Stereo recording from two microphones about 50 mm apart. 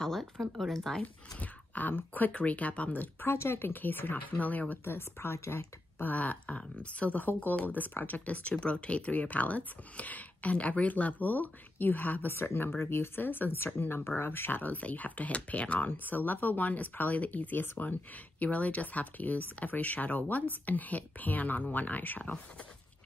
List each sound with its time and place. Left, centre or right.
0.0 s speech: centre
1.4 s speech: left
3.3 s speech: left
4.8 s speech: left
5.9 s speech: left
12.3 s speech: left
15.9 s speech: left